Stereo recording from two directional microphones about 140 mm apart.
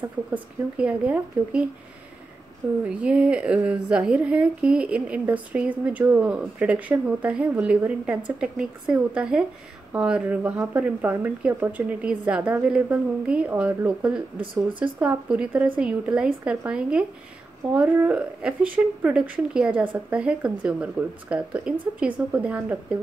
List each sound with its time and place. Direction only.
0.3 s a woman's voice: 10° right (ahead or behind)
2.8 s a woman's voice: 10° right (ahead or behind)
14.4 s speech: 40° right (ahead or behind)
15.0 s a woman's voice: 10° right (ahead or behind)